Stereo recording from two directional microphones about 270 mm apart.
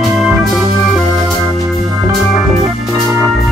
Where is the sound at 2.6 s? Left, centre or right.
Centre.